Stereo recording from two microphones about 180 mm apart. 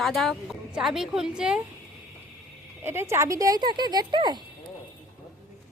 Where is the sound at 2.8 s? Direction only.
15° right (ahead or behind).